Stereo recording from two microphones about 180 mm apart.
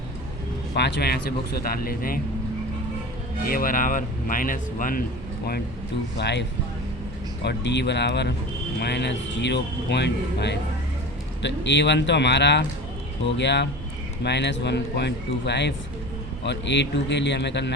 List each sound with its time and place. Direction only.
0.8 s speech: 65° left (ahead or behind)
3.4 s speech: 50° left (ahead or behind)
6.1 s speech: 70° left (ahead or behind)
7.4 s speech: 75° left (ahead or behind)